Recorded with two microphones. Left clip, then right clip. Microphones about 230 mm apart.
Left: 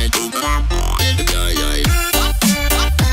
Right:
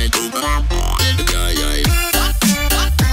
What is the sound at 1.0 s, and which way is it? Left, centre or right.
Music, centre.